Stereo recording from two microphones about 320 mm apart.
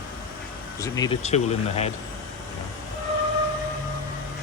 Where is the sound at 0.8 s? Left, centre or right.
Centre.